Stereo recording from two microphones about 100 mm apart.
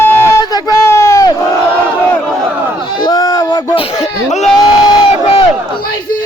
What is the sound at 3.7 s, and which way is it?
Speech, 80° left.